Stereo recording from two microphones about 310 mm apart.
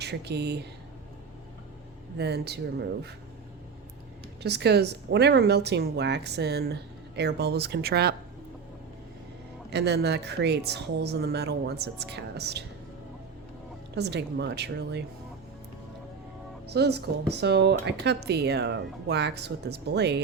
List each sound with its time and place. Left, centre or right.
0.0 s speech: right
2.1 s speech: right
4.4 s speech: right
9.6 s speech: right
13.9 s speech: right
16.6 s speech: right